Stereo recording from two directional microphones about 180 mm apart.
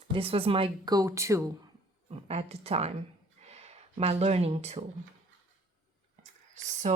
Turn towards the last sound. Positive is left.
turn(degrees=-40)  # may be behind; listen again after turning